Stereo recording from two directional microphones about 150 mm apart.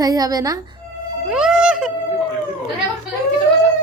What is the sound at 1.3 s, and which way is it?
Music, 5° right (ahead or behind).